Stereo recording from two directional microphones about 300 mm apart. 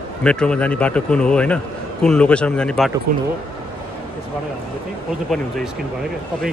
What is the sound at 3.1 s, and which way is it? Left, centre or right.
Speech, right.